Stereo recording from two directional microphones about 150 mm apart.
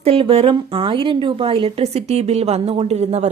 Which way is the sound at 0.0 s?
40° right (ahead or behind).